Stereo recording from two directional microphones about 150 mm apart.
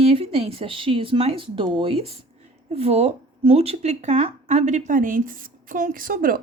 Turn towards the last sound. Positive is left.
turn(degrees=-70)  # may be behind; listen again after turning